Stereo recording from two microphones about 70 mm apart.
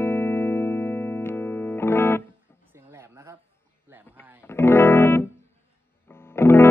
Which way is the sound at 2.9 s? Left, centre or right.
Right.